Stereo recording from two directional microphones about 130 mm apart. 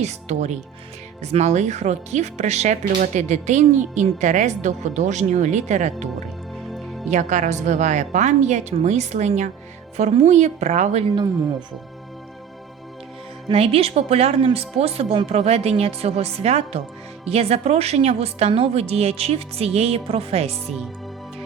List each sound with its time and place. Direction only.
0.0 s speech: 60° right (ahead or behind)
7.1 s speech: 70° right (ahead or behind)
13.5 s speech: 50° right (ahead or behind)
20.7 s speech: centre (ahead or behind)